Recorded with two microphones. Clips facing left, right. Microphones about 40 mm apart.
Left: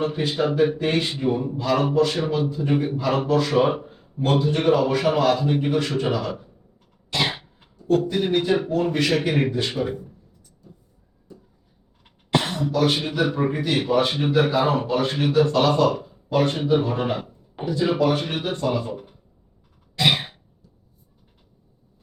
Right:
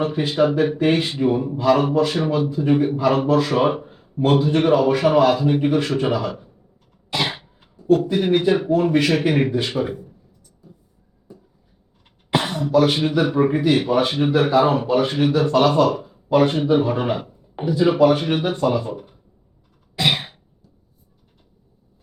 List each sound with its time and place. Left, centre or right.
0.0 s speech: centre
11.3 s a sound: centre
12.3 s speech: centre
20.0 s cough: centre